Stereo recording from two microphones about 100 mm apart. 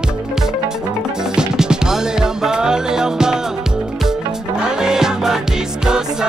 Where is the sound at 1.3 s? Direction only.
10° right (ahead or behind).